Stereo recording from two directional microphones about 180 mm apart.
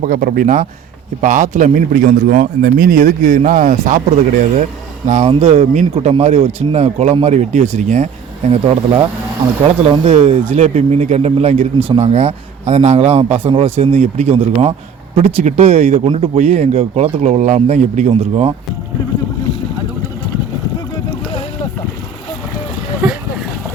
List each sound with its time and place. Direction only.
0.0 s a man's voice: 45° right (ahead or behind)
23.0 s boat: 5° right (ahead or behind)